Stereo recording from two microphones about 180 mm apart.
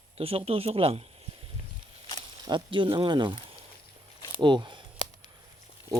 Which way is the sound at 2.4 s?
25° right (ahead or behind).